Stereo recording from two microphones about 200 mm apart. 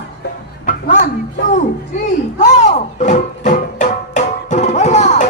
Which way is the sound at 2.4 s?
35° left (ahead or behind).